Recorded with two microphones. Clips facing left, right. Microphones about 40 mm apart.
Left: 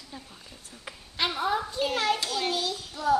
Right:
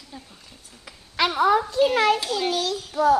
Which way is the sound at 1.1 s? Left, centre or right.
Right.